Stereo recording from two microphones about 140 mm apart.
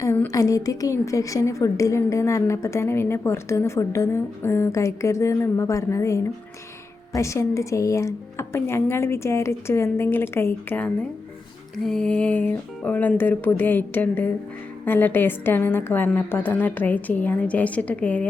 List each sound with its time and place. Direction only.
0.0 s a woman's voice: 20° left (ahead or behind)